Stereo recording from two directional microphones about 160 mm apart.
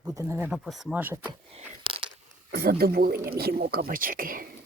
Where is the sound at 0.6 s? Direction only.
Centre (ahead or behind).